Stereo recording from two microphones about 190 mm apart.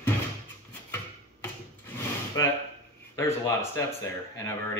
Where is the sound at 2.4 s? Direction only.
15° left (ahead or behind).